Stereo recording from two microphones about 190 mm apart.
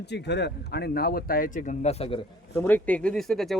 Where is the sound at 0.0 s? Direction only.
65° left (ahead or behind); by 2.2 s 30° left (ahead or behind).